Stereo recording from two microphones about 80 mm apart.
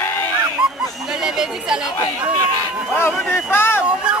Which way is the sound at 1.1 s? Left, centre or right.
Centre.